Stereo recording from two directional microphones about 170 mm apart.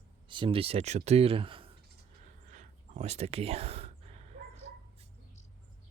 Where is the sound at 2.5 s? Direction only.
45° right (ahead or behind).